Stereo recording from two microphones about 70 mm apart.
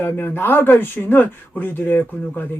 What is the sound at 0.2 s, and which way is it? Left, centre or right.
Speech, left.